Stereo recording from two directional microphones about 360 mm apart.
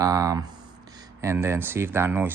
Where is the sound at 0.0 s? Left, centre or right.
Centre.